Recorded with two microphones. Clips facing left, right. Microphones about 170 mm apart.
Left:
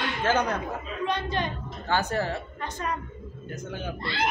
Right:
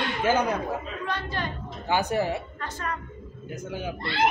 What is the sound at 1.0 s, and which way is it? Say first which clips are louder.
Speech: left 5 dB; 20° left (ahead or behind).